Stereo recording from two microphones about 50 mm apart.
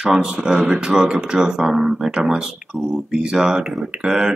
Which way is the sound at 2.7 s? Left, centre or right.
Centre.